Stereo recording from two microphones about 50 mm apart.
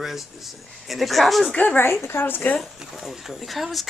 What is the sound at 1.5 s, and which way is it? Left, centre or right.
Speech, left.